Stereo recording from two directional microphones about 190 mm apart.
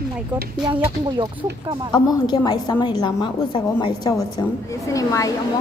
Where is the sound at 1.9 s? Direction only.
20° left (ahead or behind).